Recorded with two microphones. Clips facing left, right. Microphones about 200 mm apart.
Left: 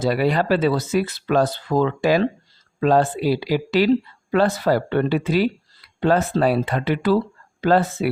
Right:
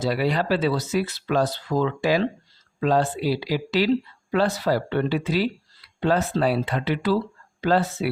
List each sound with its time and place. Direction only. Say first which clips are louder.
0.0 s speech: left 4 dB; 50° left (ahead or behind)